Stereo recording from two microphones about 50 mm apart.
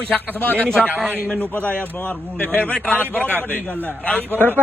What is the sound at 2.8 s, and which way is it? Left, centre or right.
Speech, left.